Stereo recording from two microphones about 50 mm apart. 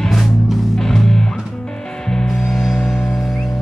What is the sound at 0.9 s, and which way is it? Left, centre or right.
Music, centre.